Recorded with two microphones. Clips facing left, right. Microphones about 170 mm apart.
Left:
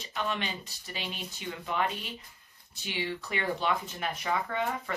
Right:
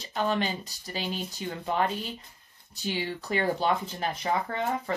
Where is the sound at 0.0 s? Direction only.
35° right (ahead or behind).